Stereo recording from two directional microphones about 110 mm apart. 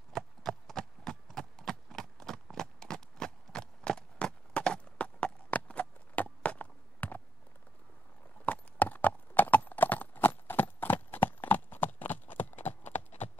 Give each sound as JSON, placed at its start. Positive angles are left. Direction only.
{"t": 0.1, "sound": "a sound", "side_deg": 5}
{"t": 8.5, "sound": "clip-clop", "side_deg": 15}
{"t": 12.8, "sound": "clip-clop", "side_deg": 90}